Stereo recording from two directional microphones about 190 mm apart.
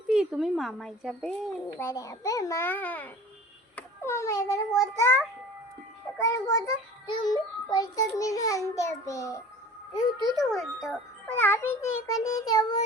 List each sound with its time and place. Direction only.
0.1 s a child's voice: 5° right (ahead or behind)
1.8 s a child's voice: 15° left (ahead or behind)
7.1 s child singing: 25° left (ahead or behind)
8.1 s a child's voice: 20° left (ahead or behind)
10.3 s a child's voice: centre (ahead or behind)
11.3 s a child's voice: 10° left (ahead or behind)